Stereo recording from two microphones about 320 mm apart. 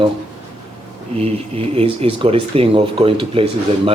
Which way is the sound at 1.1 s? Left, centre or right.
Centre.